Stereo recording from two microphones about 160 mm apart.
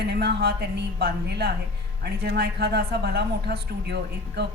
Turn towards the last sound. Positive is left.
turn(degrees=-90)